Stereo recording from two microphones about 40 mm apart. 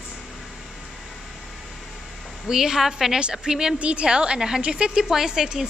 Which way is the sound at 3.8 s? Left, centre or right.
Right.